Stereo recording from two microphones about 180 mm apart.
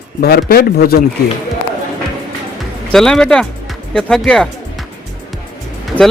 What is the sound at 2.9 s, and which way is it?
Speech, centre (ahead or behind).